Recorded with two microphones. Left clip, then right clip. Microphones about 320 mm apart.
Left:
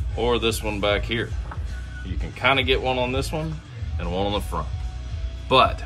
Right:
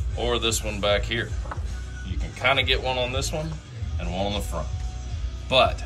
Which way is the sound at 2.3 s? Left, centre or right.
Centre.